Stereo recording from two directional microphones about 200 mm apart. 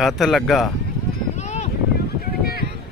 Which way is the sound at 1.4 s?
35° left (ahead or behind).